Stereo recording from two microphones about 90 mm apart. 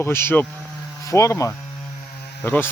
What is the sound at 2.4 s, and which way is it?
Speech, 25° left (ahead or behind).